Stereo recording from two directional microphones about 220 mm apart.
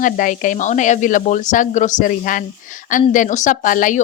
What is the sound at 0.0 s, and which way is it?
Speech, 35° left (ahead or behind).